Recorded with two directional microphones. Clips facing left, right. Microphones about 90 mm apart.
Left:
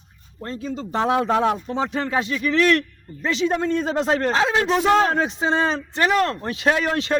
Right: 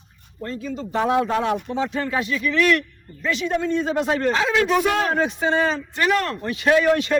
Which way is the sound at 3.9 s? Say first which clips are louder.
Left 1 dB; 30° left (ahead or behind).